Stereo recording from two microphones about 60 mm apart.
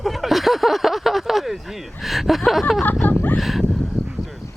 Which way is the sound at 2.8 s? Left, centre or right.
Left.